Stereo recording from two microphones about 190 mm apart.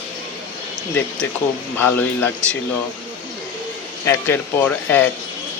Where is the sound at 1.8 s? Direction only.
10° left (ahead or behind).